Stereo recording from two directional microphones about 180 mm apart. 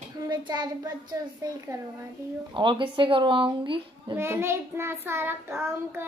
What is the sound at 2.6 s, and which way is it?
A child's voice, 25° right (ahead or behind).